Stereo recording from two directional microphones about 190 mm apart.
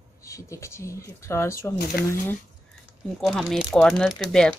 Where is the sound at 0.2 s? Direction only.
15° left (ahead or behind).